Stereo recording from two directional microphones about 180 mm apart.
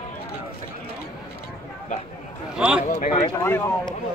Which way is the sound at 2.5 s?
5° right (ahead or behind).